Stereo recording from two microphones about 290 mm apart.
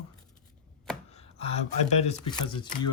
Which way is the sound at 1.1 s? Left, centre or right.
Left.